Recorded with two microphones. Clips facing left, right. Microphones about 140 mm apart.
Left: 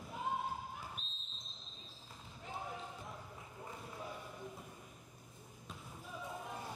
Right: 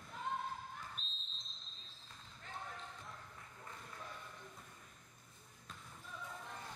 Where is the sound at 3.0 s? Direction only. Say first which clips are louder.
Left 4 dB; 15° left (ahead or behind).